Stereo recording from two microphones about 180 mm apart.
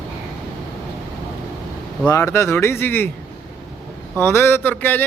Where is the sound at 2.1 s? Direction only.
15° left (ahead or behind).